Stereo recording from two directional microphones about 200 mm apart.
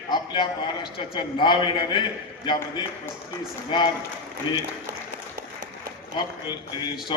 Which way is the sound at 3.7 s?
25° left (ahead or behind).